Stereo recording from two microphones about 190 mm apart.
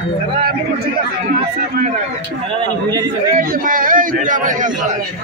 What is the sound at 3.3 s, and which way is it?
A man's voice, 45° right (ahead or behind).